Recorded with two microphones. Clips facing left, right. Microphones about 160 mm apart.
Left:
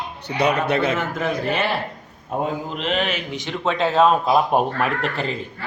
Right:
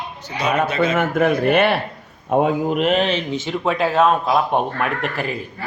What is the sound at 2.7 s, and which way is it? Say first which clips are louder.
Speech: right 5 dB; 50° right (ahead or behind).